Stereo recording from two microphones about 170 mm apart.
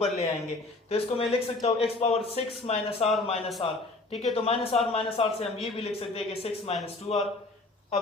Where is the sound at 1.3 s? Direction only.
35° left (ahead or behind).